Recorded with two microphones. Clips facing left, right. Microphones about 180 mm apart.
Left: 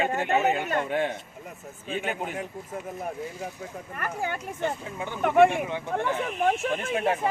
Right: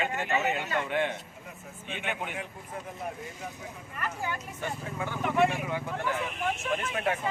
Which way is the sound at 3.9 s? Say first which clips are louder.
Left 3 dB; 55° left (ahead or behind).